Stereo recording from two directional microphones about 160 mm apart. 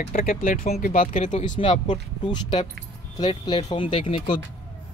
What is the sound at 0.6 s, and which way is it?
Speech, 50° left (ahead or behind).